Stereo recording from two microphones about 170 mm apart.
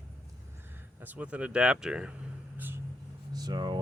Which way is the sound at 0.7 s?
10° right (ahead or behind).